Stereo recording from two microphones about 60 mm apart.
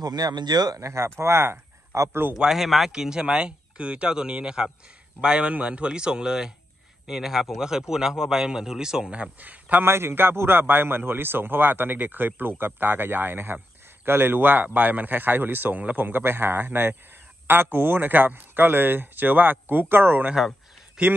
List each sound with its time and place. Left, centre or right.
0.0 s speech: right
1.1 s speech: right
2.3 s speech: centre
9.2 s a man's voice: right
9.8 s a man's voice: right
21.0 s speech: centre